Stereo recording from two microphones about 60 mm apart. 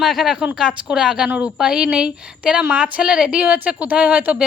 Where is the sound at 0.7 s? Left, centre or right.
Centre.